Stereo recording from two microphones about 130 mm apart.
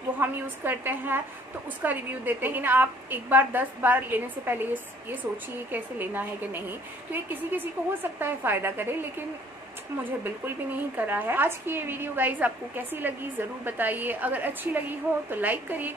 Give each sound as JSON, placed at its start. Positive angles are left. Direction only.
{"t": 0.2, "sound": "a woman's voice", "side_deg": -15}
{"t": 5.7, "sound": "a woman's voice", "side_deg": -15}
{"t": 11.0, "sound": "a woman's voice", "side_deg": -15}